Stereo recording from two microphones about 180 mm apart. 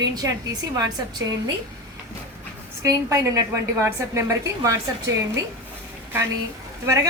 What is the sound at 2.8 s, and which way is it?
A woman's voice, 20° right (ahead or behind).